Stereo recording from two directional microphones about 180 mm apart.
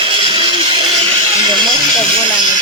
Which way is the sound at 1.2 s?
30° right (ahead or behind).